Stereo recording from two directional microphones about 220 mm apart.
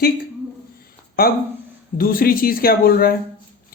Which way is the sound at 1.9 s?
40° left (ahead or behind).